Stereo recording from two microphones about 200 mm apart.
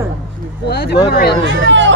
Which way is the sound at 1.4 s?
65° right (ahead or behind).